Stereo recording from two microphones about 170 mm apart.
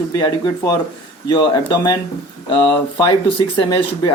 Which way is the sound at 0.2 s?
25° left (ahead or behind).